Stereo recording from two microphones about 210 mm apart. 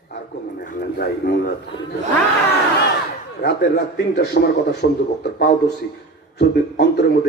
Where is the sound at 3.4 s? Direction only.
55° left (ahead or behind).